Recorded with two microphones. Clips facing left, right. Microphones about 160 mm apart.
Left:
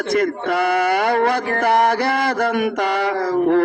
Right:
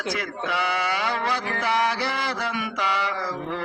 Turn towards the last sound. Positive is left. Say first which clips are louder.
# left 14 dB
turn(degrees=55)  # may be behind; listen again after turning